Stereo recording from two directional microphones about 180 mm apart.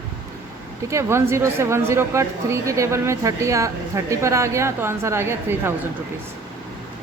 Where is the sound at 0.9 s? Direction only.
15° right (ahead or behind).